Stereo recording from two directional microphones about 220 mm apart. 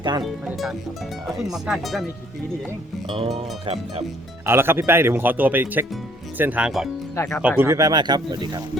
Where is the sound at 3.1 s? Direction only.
25° right (ahead or behind).